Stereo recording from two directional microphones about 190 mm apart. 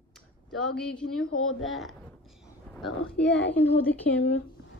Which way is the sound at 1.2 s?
90° left.